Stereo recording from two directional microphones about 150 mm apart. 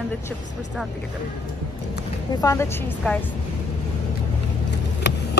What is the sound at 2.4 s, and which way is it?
Speech, 20° left (ahead or behind).